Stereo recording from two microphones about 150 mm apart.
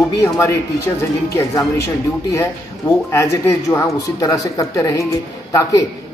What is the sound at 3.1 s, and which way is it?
A man's voice, 15° left (ahead or behind).